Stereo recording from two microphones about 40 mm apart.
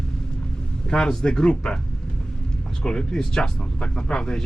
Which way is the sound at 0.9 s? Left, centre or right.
Centre.